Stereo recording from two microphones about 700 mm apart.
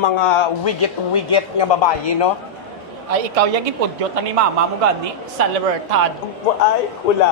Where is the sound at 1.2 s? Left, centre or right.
Left.